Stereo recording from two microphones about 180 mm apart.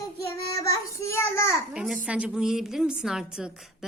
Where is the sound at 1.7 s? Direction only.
5° right (ahead or behind).